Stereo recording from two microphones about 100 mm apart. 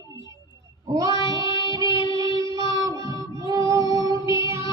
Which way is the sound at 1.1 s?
50° left (ahead or behind).